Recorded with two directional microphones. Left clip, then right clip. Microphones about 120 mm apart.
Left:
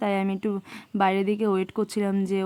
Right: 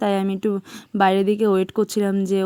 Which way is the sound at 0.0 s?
35° right (ahead or behind).